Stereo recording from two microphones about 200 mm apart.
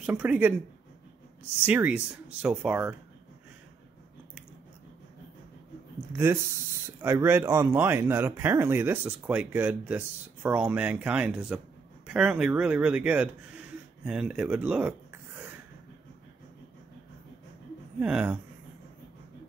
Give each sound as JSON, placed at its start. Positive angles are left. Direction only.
{"t": 0.0, "sound": "speech", "side_deg": -5}
{"t": 1.7, "sound": "speech", "side_deg": -10}
{"t": 6.1, "sound": "speech", "side_deg": -10}
{"t": 18.0, "sound": "speech", "side_deg": -5}